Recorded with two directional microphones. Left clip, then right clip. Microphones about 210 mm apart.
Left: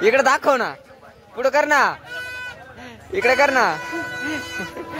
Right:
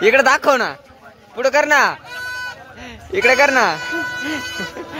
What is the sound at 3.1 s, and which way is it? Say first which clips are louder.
Speech: right 3 dB; 10° right (ahead or behind).